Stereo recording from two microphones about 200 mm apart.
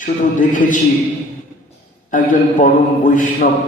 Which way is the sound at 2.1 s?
40° left (ahead or behind).